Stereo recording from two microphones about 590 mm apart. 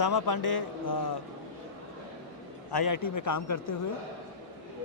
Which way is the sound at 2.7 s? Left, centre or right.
Left.